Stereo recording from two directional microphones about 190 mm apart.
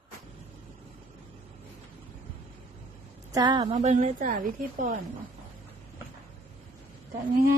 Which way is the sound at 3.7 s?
35° right (ahead or behind).